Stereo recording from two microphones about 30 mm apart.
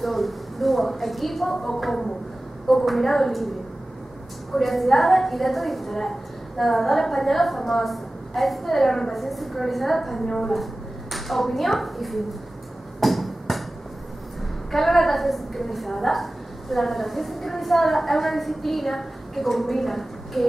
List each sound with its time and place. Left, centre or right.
0.0 s a sound: centre
2.8 s a woman's voice: centre
4.6 s a woman's voice: centre
10.5 s a woman's voice: centre
13.0 s a sound: centre
14.7 s a woman's voice: centre